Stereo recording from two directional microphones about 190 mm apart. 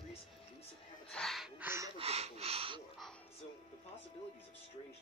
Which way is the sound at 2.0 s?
35° right (ahead or behind).